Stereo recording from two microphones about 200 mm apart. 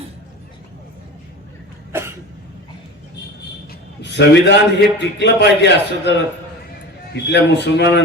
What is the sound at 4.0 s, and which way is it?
A man's voice, 60° left (ahead or behind).